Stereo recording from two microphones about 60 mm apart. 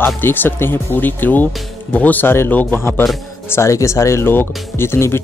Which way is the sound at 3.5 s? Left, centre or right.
Left.